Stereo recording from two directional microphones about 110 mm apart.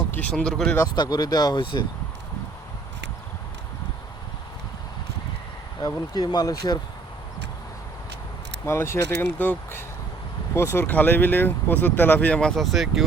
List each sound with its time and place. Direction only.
0.1 s speech: 15° left (ahead or behind)
0.9 s speech: 35° left (ahead or behind)
5.8 s speech: 35° left (ahead or behind)
8.6 s speech: 25° left (ahead or behind); by 13.1 s centre (ahead or behind)